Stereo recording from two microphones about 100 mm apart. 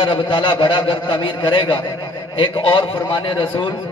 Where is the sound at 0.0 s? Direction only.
55° left (ahead or behind).